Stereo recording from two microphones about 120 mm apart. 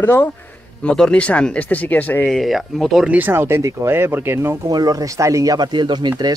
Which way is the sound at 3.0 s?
15° right (ahead or behind).